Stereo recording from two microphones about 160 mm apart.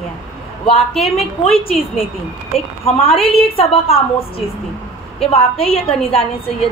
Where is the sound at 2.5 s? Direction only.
35° left (ahead or behind).